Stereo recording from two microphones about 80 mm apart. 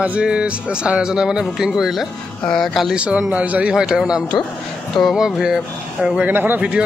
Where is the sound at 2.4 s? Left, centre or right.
Centre.